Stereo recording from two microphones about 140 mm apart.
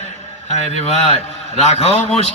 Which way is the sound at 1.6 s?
50° left (ahead or behind).